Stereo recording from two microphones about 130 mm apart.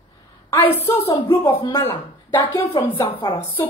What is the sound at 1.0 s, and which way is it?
Speech, 40° left (ahead or behind).